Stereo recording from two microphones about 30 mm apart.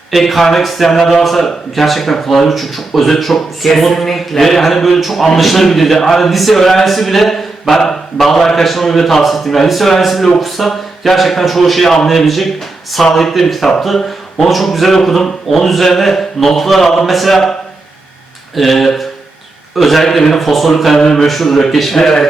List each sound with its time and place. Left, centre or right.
0.1 s a man's voice: centre
17.1 s speech: centre
18.5 s a man's voice: centre
21.0 s a man's voice: centre
21.2 s speech: centre
21.9 s a man's voice: centre